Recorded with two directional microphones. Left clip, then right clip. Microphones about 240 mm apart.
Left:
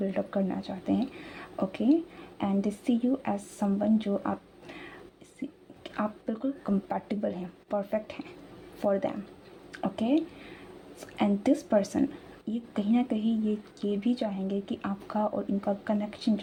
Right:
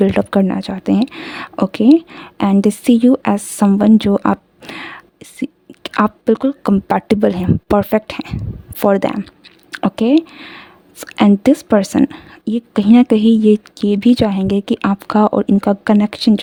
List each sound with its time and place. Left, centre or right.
0.0 s speech: right